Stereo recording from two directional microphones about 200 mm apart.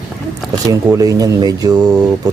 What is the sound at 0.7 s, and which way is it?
Speech, 15° right (ahead or behind).